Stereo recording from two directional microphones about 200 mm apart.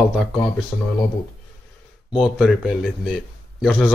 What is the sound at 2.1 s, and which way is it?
Speech, 5° right (ahead or behind).